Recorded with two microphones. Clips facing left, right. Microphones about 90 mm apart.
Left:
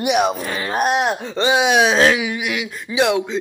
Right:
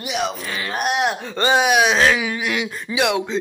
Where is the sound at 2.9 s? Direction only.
30° left (ahead or behind).